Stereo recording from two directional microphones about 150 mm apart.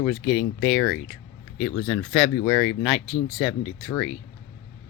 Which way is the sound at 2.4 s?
15° left (ahead or behind).